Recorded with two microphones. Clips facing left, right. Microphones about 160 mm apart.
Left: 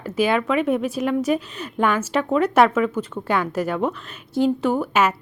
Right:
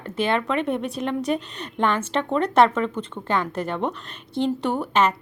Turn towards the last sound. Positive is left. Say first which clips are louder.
# left 2 dB
turn(degrees=5)  # may be behind; listen again after turning